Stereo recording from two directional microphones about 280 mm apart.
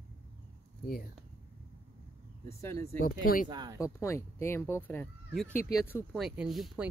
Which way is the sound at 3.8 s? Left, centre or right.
Centre.